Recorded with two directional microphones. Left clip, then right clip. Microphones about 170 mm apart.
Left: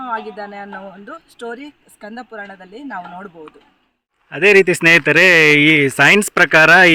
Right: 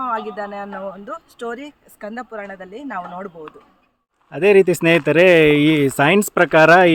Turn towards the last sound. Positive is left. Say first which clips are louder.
# left 2 dB
turn(degrees=10)  # may be behind; listen again after turning